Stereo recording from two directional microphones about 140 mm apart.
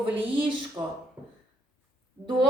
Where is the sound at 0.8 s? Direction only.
20° right (ahead or behind).